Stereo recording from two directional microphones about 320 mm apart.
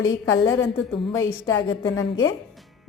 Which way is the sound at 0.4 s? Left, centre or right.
Centre.